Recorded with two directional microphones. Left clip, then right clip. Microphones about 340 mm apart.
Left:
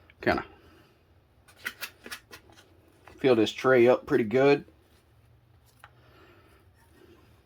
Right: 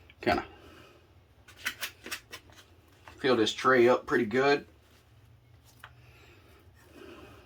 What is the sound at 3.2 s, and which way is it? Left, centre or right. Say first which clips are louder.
Speech: left 3 dB; left.